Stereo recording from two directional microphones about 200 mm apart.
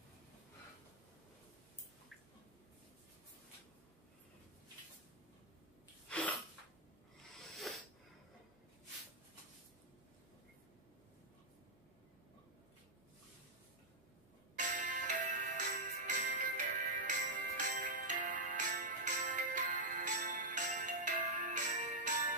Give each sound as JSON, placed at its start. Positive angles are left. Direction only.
{"t": 6.0, "sound": "sneeze", "side_deg": 5}
{"t": 7.5, "sound": "a sound", "side_deg": 0}
{"t": 14.6, "sound": "music", "side_deg": -40}